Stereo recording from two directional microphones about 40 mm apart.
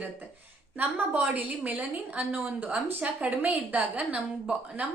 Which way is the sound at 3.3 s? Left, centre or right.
Right.